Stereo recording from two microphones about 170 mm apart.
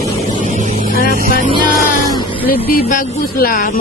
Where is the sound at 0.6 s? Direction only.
45° right (ahead or behind).